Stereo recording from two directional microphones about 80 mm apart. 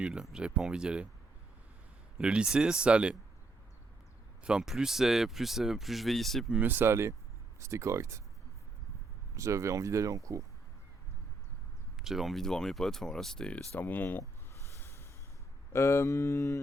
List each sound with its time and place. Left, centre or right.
0.0 s speech: centre
2.1 s speech: centre
4.4 s speech: centre
6.5 s speech: right
9.3 s speech: right
11.9 s speech: centre; by 14.3 s left
14.8 s snort: left
15.7 s mantra: left